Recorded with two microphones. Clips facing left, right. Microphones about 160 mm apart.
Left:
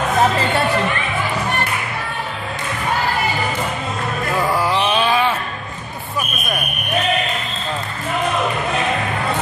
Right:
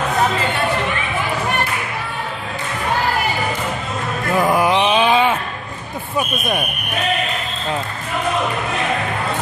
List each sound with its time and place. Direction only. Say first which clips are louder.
4.4 s mantra: right 4 dB; 20° right (ahead or behind)